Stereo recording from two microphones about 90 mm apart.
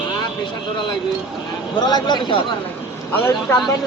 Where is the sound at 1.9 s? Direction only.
50° left (ahead or behind).